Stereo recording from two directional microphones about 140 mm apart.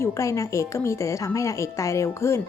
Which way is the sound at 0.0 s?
20° left (ahead or behind).